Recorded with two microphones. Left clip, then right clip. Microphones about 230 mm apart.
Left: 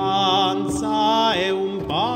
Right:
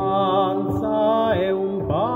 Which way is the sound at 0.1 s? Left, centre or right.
Centre.